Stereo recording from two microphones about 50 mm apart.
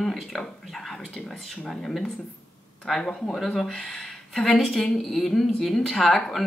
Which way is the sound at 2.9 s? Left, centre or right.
Centre.